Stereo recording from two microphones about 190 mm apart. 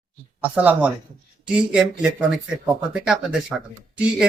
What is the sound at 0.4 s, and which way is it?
Speech, 10° right (ahead or behind).